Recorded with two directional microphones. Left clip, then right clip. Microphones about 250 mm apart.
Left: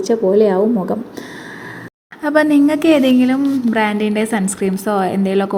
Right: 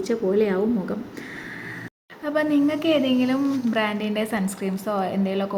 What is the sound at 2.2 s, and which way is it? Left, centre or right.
A woman's voice, left.